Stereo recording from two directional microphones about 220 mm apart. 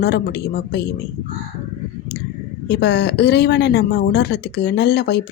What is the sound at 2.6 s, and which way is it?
A woman's voice, 50° left (ahead or behind).